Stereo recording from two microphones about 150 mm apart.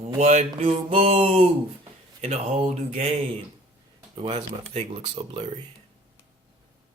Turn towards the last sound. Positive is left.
turn(degrees=-40)  # may be behind; listen again after turning